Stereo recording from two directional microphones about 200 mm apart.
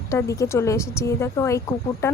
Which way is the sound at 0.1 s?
15° left (ahead or behind).